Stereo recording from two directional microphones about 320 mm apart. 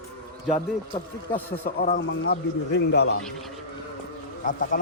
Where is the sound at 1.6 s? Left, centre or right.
Left.